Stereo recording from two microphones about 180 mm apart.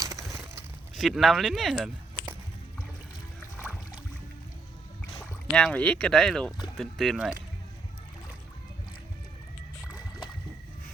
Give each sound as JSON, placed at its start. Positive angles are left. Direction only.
{"t": 0.0, "sound": "a sound", "side_deg": -20}
{"t": 0.9, "sound": "speech", "side_deg": 0}
{"t": 5.5, "sound": "speech", "side_deg": 5}